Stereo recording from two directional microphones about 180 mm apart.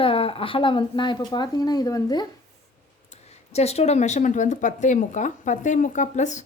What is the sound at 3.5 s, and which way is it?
Speech, 35° left (ahead or behind).